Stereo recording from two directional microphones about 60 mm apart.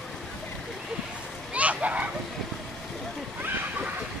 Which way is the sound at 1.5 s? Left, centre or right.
Right.